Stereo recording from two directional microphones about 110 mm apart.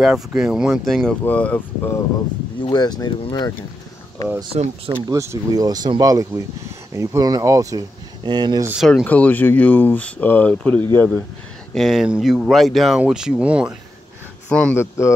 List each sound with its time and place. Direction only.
0.0 s speech: 5° right (ahead or behind)
1.2 s speech: 15° left (ahead or behind)
2.7 s speech: 40° left (ahead or behind)
4.5 s speech: 80° right
5.0 s speech: 30° right (ahead or behind)
8.7 s speech: 5° right (ahead or behind)
9.0 s speech: 15° left (ahead or behind)
11.7 s speech: centre (ahead or behind)
14.5 s speech: 10° left (ahead or behind)
14.8 s speech: 25° left (ahead or behind)